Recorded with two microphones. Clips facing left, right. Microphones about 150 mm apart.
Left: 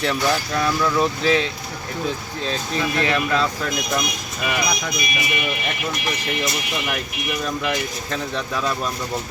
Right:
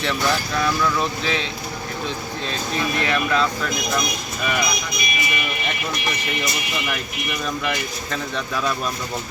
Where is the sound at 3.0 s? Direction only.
30° left (ahead or behind).